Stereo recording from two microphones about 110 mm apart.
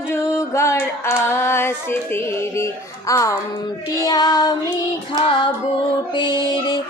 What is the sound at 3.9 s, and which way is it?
Music, 35° left (ahead or behind).